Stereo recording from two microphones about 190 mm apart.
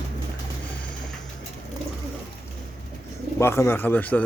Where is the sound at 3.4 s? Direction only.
15° left (ahead or behind).